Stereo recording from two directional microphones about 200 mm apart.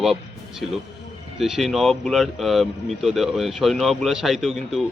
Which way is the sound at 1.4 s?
Centre (ahead or behind).